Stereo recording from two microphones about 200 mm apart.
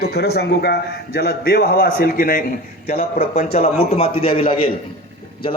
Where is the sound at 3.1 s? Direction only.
30° left (ahead or behind).